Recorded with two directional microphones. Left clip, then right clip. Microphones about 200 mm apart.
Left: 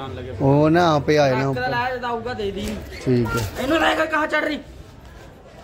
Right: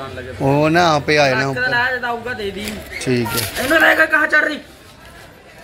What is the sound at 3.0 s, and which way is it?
Speech, 10° left (ahead or behind).